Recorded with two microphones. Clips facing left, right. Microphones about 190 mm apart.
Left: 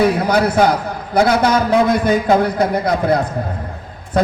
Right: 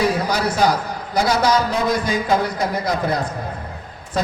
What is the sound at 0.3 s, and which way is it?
A man's voice, 55° left (ahead or behind).